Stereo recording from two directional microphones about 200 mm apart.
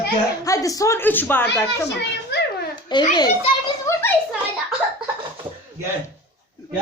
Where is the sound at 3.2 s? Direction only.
15° left (ahead or behind).